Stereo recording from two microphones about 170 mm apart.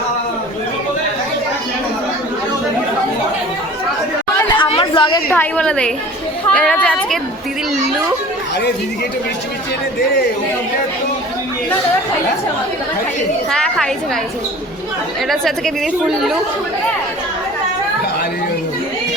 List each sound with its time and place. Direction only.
4.6 s chatter: 30° left (ahead or behind)
5.3 s a woman's voice: 10° left (ahead or behind)
13.5 s a woman's voice: 5° left (ahead or behind)
15.3 s a woman's voice: centre (ahead or behind)